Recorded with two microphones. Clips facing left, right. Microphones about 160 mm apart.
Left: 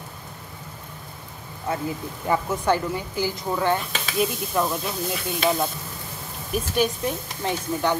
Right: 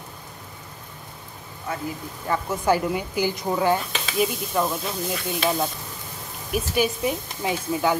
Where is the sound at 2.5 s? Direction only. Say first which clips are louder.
Right 1 dB; 10° right (ahead or behind).